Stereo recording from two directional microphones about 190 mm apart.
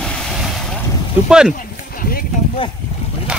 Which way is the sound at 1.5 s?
45° left (ahead or behind).